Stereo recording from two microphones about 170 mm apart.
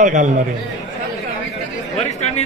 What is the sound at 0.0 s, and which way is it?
Speech, 45° right (ahead or behind).